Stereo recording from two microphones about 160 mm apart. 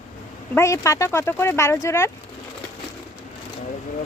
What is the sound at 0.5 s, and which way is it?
Speech, 20° left (ahead or behind).